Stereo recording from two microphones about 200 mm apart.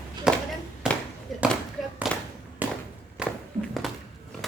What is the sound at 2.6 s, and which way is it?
Walk, 10° right (ahead or behind).